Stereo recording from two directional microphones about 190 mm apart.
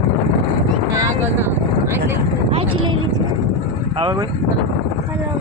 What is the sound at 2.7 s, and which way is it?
Vehicle, 90° right.